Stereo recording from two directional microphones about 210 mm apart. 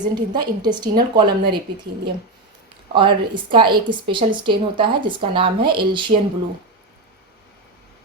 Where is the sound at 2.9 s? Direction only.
25° right (ahead or behind).